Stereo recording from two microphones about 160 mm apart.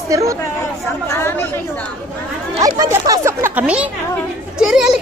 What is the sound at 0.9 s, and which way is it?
Speech, 15° left (ahead or behind).